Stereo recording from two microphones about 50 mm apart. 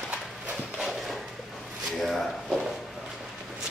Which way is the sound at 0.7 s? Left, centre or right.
Centre.